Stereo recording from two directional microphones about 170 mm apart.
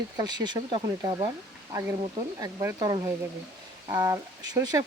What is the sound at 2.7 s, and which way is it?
Speech, 30° right (ahead or behind).